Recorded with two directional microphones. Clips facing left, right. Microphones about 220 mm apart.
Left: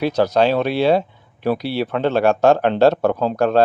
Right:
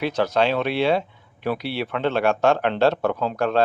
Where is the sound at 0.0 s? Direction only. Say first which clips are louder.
Left 5 dB; 40° left (ahead or behind).